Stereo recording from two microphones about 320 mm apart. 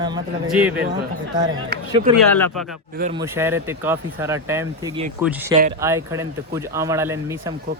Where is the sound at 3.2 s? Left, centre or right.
Centre.